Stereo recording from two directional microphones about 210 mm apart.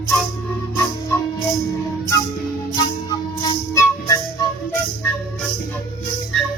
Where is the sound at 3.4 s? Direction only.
15° left (ahead or behind).